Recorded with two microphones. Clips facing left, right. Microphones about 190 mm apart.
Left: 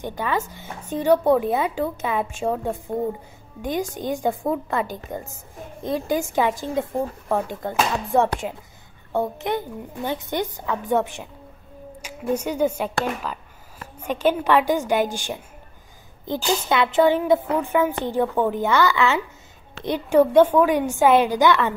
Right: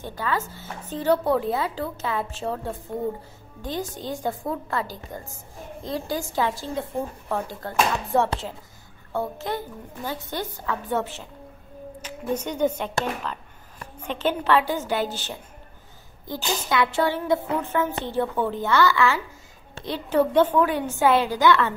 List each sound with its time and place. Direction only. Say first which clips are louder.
0.0 s a woman's voice: left 3 dB; 20° left (ahead or behind)